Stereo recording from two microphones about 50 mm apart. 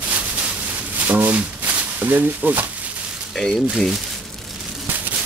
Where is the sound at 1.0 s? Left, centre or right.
Right.